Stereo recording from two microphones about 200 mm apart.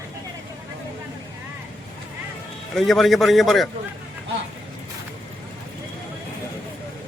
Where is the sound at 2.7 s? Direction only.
Centre (ahead or behind).